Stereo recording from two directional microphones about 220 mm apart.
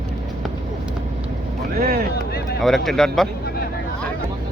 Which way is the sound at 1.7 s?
45° right (ahead or behind).